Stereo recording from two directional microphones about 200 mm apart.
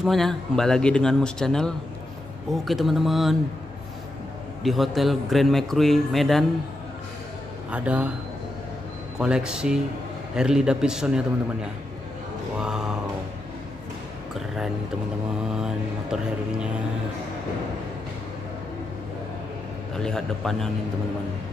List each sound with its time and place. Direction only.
0.0 s a man's voice: centre (ahead or behind)
4.6 s a man's voice: centre (ahead or behind)
7.7 s a man's voice: 5° right (ahead or behind)
9.2 s a man's voice: 5° right (ahead or behind)
12.5 s mantra: 5° right (ahead or behind)
15.6 s a sound: 5° right (ahead or behind)
20.0 s a man's voice: centre (ahead or behind)